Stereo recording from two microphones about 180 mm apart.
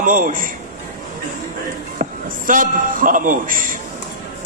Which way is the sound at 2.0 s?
55° right (ahead or behind).